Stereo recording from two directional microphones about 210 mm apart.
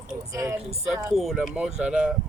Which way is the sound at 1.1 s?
Centre (ahead or behind).